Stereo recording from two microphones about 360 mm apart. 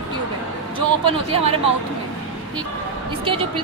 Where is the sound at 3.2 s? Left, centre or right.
Centre.